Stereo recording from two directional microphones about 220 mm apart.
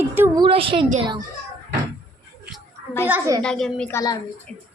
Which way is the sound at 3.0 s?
10° right (ahead or behind).